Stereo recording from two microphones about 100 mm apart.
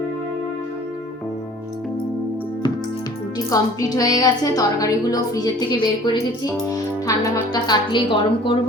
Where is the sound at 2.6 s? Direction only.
50° left (ahead or behind).